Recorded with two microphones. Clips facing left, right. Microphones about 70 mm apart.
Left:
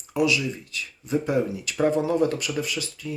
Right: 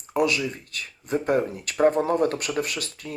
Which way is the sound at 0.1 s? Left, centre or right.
Right.